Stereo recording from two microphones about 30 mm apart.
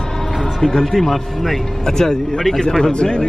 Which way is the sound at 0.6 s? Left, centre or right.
Centre.